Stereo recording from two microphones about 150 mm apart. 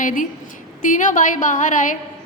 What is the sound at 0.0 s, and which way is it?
A woman's voice, 60° left (ahead or behind).